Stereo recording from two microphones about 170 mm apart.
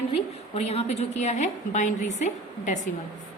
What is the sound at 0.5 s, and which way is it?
A woman's voice, 40° left (ahead or behind).